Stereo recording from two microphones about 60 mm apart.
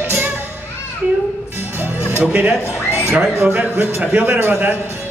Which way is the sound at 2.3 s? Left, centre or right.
Right.